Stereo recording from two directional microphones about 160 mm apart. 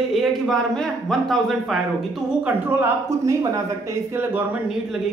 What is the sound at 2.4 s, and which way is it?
Speech, 15° right (ahead or behind).